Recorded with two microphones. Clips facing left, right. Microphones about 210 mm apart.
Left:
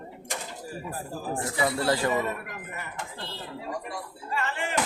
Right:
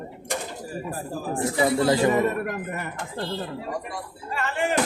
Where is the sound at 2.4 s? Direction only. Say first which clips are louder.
Right 9 dB; 50° right (ahead or behind).